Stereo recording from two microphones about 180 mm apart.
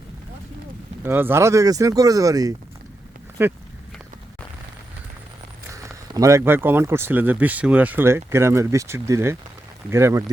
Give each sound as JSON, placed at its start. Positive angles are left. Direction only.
{"t": 1.0, "sound": "speech", "side_deg": -10}
{"t": 5.7, "sound": "speech", "side_deg": -15}